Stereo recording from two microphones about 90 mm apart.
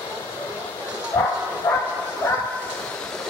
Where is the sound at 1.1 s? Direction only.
30° left (ahead or behind).